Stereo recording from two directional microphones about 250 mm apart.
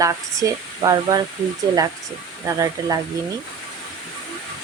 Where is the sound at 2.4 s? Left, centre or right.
Centre.